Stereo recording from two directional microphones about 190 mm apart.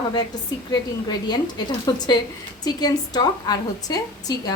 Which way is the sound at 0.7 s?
20° left (ahead or behind).